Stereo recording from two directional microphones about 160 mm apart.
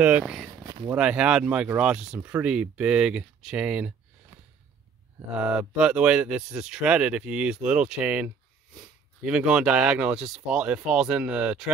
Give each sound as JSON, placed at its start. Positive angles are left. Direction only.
{"t": 0.0, "sound": "speech", "side_deg": -5}
{"t": 0.7, "sound": "a sound", "side_deg": -25}
{"t": 0.9, "sound": "speech", "side_deg": -5}
{"t": 5.3, "sound": "speech", "side_deg": -10}